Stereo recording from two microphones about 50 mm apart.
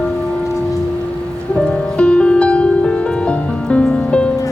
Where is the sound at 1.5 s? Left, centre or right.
Centre.